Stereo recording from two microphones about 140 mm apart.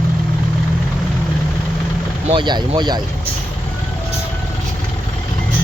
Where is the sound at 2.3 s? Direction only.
30° right (ahead or behind).